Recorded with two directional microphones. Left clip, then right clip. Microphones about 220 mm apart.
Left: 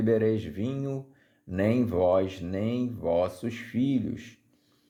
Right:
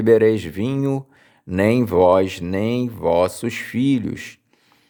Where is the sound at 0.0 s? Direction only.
35° right (ahead or behind).